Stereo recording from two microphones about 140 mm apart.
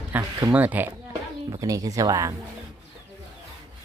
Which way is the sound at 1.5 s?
25° right (ahead or behind).